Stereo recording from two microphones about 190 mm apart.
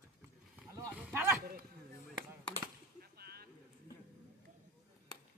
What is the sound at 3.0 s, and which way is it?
Boat, 55° right (ahead or behind).